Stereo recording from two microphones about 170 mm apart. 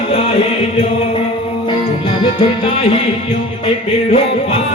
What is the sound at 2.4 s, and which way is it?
Music, 35° left (ahead or behind).